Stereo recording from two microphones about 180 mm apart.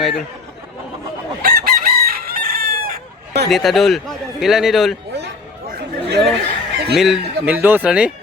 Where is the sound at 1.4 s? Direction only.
55° right (ahead or behind).